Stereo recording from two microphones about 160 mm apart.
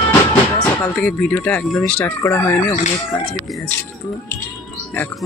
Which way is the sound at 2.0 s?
15° left (ahead or behind).